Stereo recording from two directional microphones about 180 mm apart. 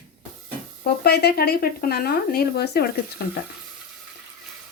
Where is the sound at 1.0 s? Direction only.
65° left (ahead or behind).